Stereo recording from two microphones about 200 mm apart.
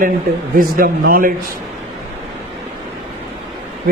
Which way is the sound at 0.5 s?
45° right (ahead or behind).